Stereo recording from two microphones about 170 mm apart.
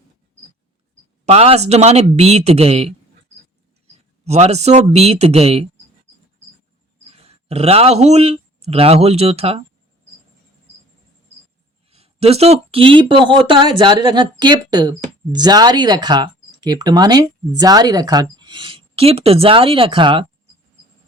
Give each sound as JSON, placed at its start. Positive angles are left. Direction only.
{"t": 1.2, "sound": "speech", "side_deg": -35}
{"t": 4.3, "sound": "speech", "side_deg": -40}
{"t": 7.2, "sound": "a sound", "side_deg": -40}
{"t": 8.0, "sound": "speech", "side_deg": -40}
{"t": 11.9, "sound": "speech", "side_deg": -35}